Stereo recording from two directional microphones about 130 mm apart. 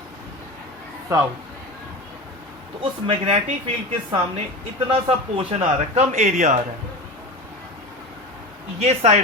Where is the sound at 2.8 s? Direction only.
50° right (ahead or behind).